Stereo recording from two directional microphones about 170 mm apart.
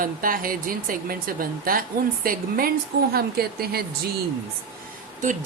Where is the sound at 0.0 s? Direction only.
55° right (ahead or behind).